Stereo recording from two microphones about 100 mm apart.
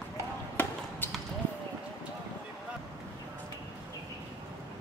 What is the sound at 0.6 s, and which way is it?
Basketball bounce, 20° left (ahead or behind).